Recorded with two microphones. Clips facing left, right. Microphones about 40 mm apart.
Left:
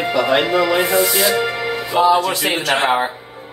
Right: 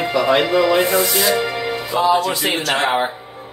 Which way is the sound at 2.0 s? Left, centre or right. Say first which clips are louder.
Left 2 dB; left.